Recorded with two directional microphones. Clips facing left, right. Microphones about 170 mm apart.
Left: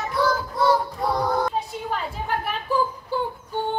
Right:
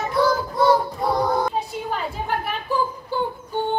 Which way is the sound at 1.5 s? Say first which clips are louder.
Right 1 dB; centre (ahead or behind).